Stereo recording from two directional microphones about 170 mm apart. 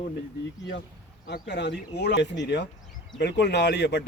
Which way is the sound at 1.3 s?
85° left.